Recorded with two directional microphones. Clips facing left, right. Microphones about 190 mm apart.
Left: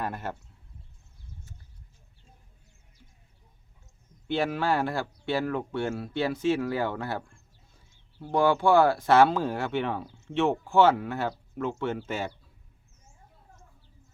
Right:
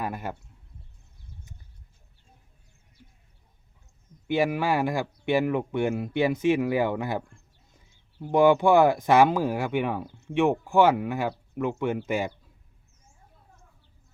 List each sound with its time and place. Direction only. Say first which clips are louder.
0.0 s speech: right 1 dB; 10° right (ahead or behind)
4.3 s speech: right 2 dB; 10° right (ahead or behind)